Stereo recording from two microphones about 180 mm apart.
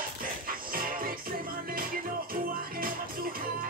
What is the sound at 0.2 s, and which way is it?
Music, 50° right (ahead or behind).